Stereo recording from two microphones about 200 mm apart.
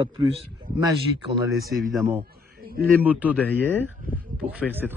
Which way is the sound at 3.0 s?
10° right (ahead or behind).